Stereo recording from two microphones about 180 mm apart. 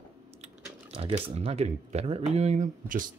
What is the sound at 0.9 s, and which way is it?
Speech, 30° right (ahead or behind).